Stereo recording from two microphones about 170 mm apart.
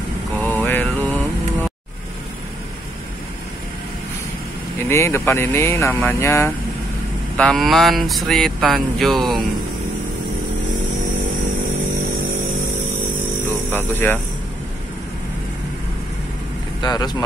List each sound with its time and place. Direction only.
0.4 s mantra: 10° left (ahead or behind)
4.8 s speech: 15° left (ahead or behind)
7.3 s speech: 5° left (ahead or behind)
13.7 s speech: 10° left (ahead or behind)
16.8 s speech: 25° left (ahead or behind)